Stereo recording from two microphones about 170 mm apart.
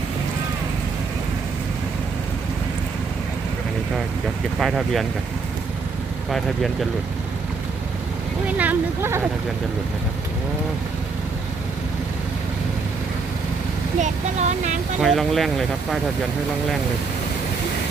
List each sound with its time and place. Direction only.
4.6 s speech: centre (ahead or behind)
8.4 s speech: 10° right (ahead or behind)
14.0 s speech: 45° right (ahead or behind)
15.0 s speech: centre (ahead or behind)